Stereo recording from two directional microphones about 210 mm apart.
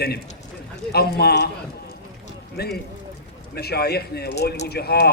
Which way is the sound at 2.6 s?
50° left (ahead or behind).